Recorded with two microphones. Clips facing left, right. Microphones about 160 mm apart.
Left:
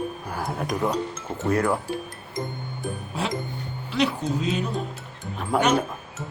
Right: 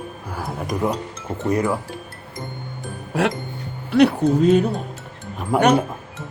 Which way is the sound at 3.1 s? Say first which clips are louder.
Right 9 dB; 75° right (ahead or behind).